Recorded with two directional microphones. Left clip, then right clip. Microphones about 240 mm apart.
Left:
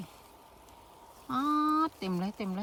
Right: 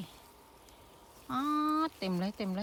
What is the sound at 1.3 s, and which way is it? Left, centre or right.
Speech, centre.